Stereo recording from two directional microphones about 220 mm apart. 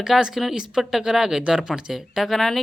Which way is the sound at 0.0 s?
Centre (ahead or behind).